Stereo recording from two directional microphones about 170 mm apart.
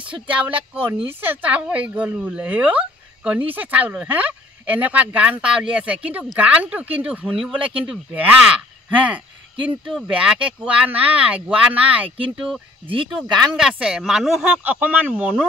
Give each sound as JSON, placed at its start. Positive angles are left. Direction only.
{"t": 0.1, "sound": "speech", "side_deg": -10}